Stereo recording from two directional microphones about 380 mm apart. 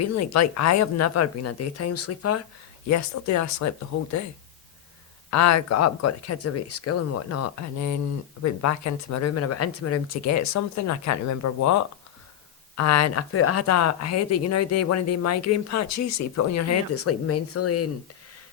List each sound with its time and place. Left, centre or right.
0.0 s speech: left
5.3 s speech: left